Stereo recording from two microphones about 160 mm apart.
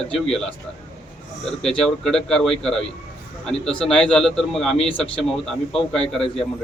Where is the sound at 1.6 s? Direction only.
5° left (ahead or behind).